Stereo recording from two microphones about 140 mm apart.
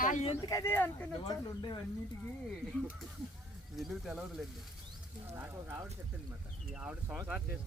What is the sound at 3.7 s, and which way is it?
Speech, centre (ahead or behind).